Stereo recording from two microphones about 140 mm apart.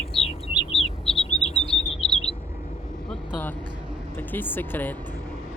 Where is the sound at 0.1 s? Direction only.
45° left (ahead or behind).